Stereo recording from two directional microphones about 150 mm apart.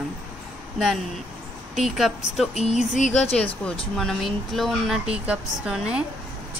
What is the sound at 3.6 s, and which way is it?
Speech, 5° left (ahead or behind).